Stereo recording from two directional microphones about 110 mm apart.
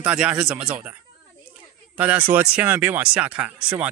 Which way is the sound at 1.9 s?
15° right (ahead or behind).